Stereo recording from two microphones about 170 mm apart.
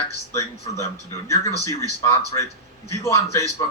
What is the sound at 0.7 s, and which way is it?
Speech, 20° left (ahead or behind).